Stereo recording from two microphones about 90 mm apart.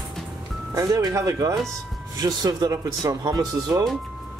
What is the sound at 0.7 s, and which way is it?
Speech, 45° right (ahead or behind).